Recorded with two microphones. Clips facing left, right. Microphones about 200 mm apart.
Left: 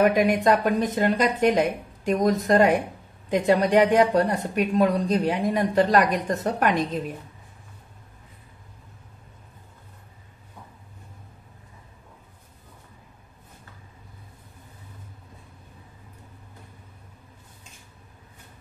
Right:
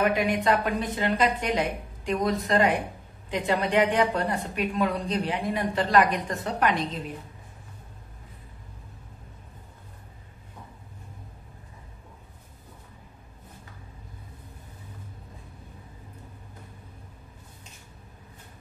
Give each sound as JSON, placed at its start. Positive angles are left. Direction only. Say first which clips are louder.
{"t": 0.0, "sound": "speech", "louder": "left 5 dB", "side_deg": 45}